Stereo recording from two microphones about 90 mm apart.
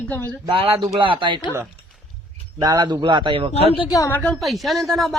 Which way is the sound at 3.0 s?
65° right (ahead or behind).